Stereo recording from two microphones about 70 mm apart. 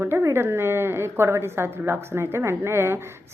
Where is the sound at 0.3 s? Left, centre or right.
Right.